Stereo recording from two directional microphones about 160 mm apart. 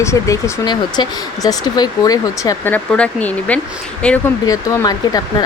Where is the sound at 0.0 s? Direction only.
15° left (ahead or behind).